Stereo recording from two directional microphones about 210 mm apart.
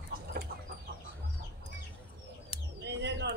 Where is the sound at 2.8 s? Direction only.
55° right (ahead or behind).